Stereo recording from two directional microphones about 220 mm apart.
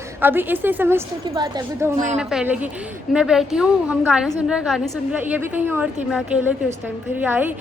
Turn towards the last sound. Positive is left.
turn(degrees=-10)  # may be behind; listen again after turning